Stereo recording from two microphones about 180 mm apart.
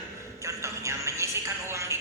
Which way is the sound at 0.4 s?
15° right (ahead or behind).